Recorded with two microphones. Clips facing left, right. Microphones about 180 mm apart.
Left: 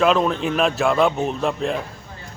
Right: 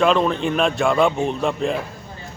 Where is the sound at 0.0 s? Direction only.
Centre (ahead or behind).